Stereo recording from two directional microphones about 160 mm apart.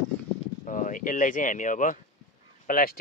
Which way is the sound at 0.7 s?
55° left (ahead or behind).